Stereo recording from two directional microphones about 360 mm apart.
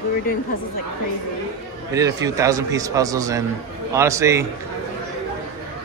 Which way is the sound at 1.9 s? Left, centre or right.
Centre.